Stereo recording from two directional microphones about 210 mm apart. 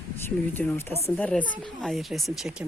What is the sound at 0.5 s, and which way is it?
Speech, 10° left (ahead or behind).